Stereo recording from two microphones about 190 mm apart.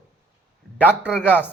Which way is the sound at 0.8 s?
10° right (ahead or behind).